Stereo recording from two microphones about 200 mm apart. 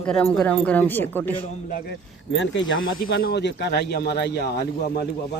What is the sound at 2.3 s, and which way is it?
Speech, 70° left (ahead or behind).